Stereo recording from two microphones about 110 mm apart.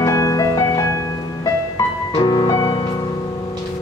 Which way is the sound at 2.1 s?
45° left (ahead or behind).